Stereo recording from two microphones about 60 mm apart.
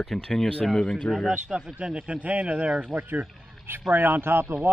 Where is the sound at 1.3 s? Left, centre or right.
Centre; by 4.6 s right.